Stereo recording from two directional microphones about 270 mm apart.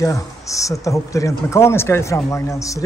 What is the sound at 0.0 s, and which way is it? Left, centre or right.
Speech, centre.